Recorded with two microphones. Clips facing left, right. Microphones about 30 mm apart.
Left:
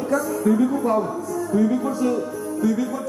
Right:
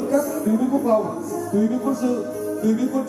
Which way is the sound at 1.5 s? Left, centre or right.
Centre.